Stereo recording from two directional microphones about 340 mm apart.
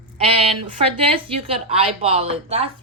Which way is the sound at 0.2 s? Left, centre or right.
Centre.